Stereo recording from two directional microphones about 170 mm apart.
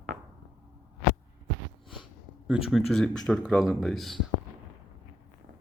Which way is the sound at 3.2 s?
5° left (ahead or behind).